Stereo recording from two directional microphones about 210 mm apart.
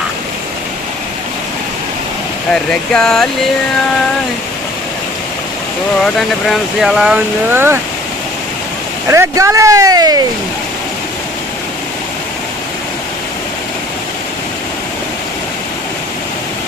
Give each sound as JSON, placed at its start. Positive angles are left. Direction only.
{"t": 2.5, "sound": "speech", "side_deg": 5}
{"t": 6.1, "sound": "speech", "side_deg": 0}
{"t": 9.0, "sound": "speech", "side_deg": -15}